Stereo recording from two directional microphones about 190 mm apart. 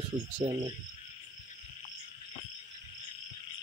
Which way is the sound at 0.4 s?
30° right (ahead or behind).